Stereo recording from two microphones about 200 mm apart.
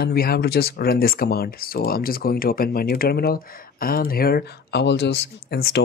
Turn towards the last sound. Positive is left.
turn(degrees=55)  # may be behind; listen again after turning